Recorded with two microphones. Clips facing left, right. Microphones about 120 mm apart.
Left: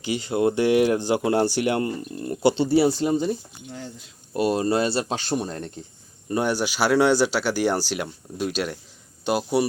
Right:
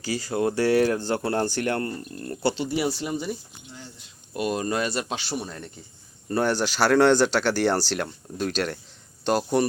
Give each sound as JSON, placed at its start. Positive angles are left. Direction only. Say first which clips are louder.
{"t": 0.0, "sound": "speech", "louder": "left 3 dB", "side_deg": 20}
{"t": 2.6, "sound": "speech", "louder": "left 7 dB", "side_deg": 30}
{"t": 4.4, "sound": "speech", "louder": "left 4 dB", "side_deg": 35}
{"t": 6.3, "sound": "speech", "louder": "even", "side_deg": 15}